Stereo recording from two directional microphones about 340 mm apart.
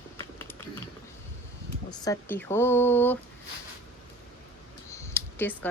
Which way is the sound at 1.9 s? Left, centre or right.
Centre.